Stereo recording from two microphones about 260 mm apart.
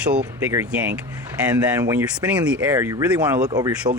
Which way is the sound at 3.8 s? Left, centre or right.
Right.